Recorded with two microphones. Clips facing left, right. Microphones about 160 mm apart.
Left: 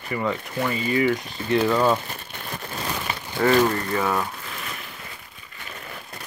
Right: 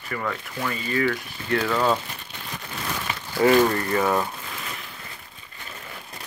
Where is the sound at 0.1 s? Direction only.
15° left (ahead or behind).